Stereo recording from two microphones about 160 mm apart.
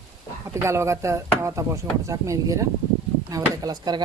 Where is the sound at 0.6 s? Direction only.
15° right (ahead or behind).